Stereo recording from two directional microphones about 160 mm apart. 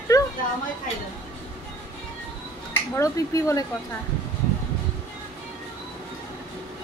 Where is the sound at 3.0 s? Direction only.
20° left (ahead or behind).